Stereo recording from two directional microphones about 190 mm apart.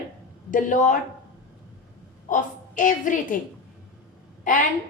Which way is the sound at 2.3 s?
40° left (ahead or behind).